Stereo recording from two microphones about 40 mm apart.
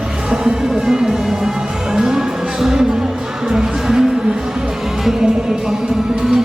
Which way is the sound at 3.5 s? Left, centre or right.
Centre.